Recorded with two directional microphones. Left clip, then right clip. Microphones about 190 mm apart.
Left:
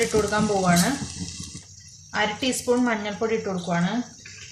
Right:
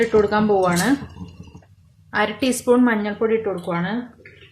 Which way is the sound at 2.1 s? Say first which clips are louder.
Right 4 dB; 50° right (ahead or behind).